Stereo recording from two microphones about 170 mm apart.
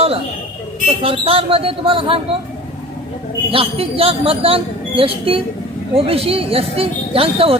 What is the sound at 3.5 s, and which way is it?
Speech, 35° right (ahead or behind).